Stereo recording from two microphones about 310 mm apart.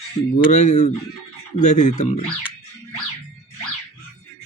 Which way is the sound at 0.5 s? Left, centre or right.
Left.